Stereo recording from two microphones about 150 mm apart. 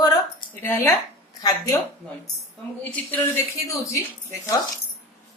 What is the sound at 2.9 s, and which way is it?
Speech, 15° left (ahead or behind).